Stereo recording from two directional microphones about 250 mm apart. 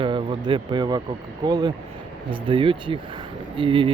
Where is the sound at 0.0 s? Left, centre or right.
Centre.